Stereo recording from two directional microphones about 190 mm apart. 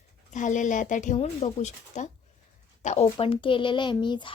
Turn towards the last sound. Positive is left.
turn(degrees=25)  # may be behind; listen again after turning